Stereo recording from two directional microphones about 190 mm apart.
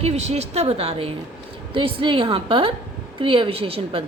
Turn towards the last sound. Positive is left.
turn(degrees=-30)  # may be behind; listen again after turning